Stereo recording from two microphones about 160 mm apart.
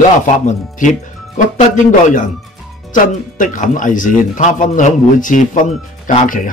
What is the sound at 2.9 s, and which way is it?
A man's voice, 55° left (ahead or behind).